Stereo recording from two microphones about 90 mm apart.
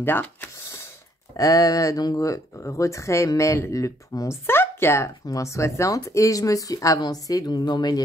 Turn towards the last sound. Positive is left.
turn(degrees=55)  # may be behind; listen again after turning